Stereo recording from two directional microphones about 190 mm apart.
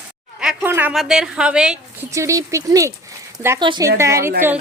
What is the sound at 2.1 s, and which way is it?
A woman's voice, 15° right (ahead or behind).